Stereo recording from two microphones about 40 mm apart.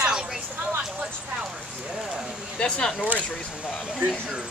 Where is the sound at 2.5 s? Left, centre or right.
Left.